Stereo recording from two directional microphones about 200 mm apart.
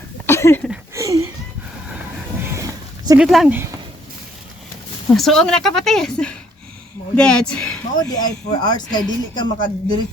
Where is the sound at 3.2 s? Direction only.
5° right (ahead or behind).